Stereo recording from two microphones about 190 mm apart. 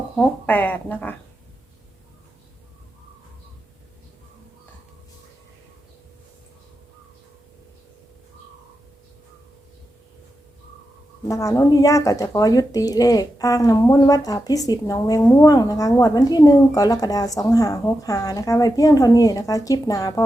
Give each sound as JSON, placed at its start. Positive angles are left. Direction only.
{"t": 0.2, "sound": "speech", "side_deg": 10}
{"t": 11.3, "sound": "a woman's voice", "side_deg": 15}